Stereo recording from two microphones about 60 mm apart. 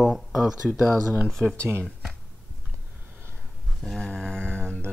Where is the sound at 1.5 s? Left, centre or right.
Right.